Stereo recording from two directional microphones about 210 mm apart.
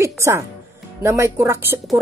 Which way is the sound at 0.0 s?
15° right (ahead or behind).